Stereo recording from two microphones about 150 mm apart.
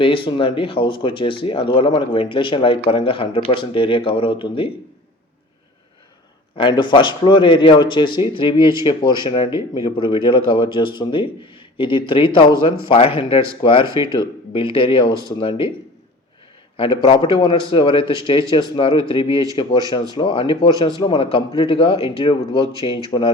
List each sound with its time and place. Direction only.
0.0 s speech: 35° left (ahead or behind)
6.6 s speech: 30° left (ahead or behind)
16.7 s speech: 35° left (ahead or behind)
23.1 s speech: 25° left (ahead or behind)